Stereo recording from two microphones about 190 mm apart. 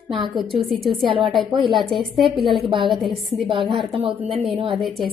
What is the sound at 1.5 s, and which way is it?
Speech, 25° right (ahead or behind).